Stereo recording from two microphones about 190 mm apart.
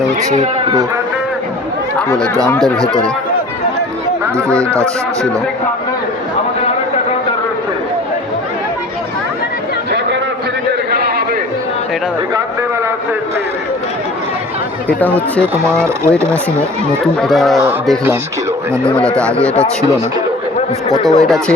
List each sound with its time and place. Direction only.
0.3 s speech: 35° right (ahead or behind)
2.1 s speech: 20° right (ahead or behind)
4.5 s speech: 15° right (ahead or behind)
14.8 s speech: 10° left (ahead or behind)
15.6 s speech: 15° right (ahead or behind)
17.2 s speech: centre (ahead or behind)
18.9 s speech: 5° left (ahead or behind)
20.9 s speech: 20° right (ahead or behind)
21.2 s speech: centre (ahead or behind)